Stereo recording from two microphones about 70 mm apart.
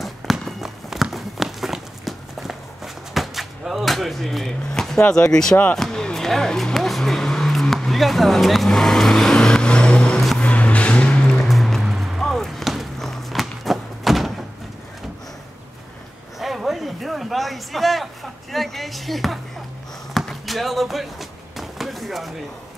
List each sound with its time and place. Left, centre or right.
0.0 s run: centre
1.1 s walk: centre
5.1 s speech: centre
5.8 s music: centre
10.4 s music: centre
11.4 s a sound: centre
16.3 s a sound: centre